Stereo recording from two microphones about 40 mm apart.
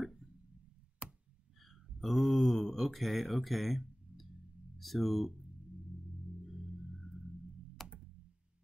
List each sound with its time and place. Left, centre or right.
1.0 s a sound: right
1.6 s mantra: centre
4.7 s speech: centre
6.4 s music: centre
7.8 s computer keyboard: centre